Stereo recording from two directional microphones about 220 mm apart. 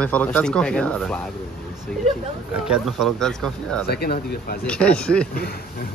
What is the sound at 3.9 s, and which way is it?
Speech, 45° left (ahead or behind).